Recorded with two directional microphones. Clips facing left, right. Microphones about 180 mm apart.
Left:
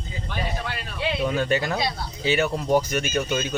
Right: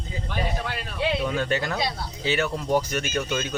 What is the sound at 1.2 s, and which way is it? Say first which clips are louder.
Speech: left 2 dB; 10° left (ahead or behind).